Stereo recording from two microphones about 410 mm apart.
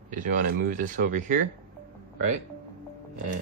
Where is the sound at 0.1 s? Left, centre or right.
Centre.